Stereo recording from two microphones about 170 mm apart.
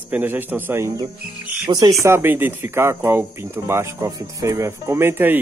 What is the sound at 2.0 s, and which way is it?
Speech, 15° right (ahead or behind).